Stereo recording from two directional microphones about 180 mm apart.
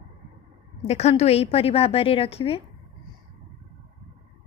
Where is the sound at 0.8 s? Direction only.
35° left (ahead or behind).